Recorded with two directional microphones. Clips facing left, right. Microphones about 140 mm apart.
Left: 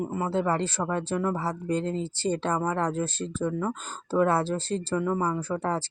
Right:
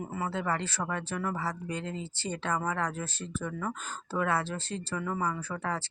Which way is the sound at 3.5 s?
20° left (ahead or behind).